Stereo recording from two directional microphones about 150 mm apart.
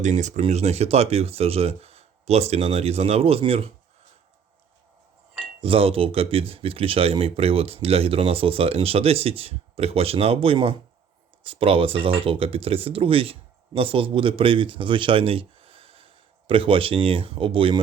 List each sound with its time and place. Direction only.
0.0 s speech: 55° right (ahead or behind)
5.6 s a man's voice: 40° right (ahead or behind)